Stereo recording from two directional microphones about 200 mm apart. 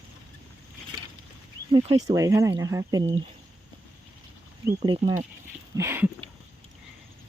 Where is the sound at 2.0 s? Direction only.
15° right (ahead or behind).